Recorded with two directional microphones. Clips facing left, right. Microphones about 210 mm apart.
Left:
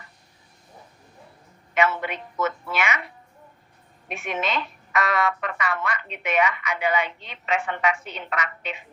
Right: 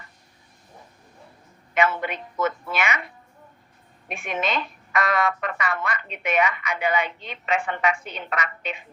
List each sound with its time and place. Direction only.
1.7 s a woman's voice: 45° right (ahead or behind)
4.1 s speech: 50° right (ahead or behind)